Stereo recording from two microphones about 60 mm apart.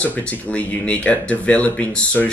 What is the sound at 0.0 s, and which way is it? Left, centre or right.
Speech, left.